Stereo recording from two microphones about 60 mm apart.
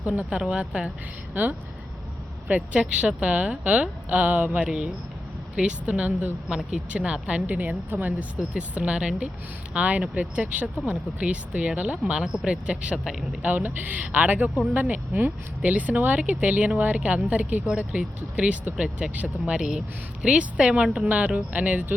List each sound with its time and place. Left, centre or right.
0.3 s speech: centre
2.6 s speech: right
6.5 s speech: centre
12.1 s speech: centre; by 21.9 s right